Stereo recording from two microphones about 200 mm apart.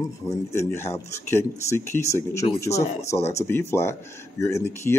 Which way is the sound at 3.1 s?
15° left (ahead or behind).